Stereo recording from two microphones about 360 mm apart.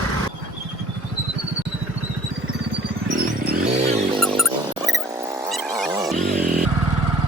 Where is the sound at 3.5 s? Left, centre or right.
Centre.